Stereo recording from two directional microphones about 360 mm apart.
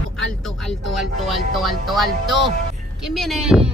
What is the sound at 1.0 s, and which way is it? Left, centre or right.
Music, centre.